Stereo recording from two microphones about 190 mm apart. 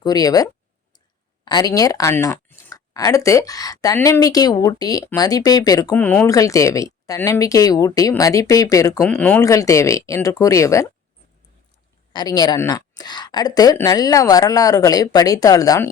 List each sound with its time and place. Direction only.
0.0 s speech: 20° left (ahead or behind)
6.0 s speech: 5° left (ahead or behind)
6.2 s speech: 15° left (ahead or behind)
9.0 s speech: 5° left (ahead or behind)
12.1 s speech: 20° left (ahead or behind)